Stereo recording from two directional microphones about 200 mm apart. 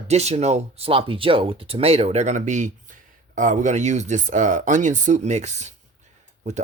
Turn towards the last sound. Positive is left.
turn(degrees=-35)  # may be behind; listen again after turning